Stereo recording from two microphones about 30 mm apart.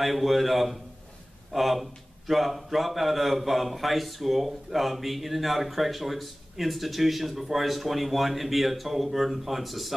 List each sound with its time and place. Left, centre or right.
0.0 s a man's voice: centre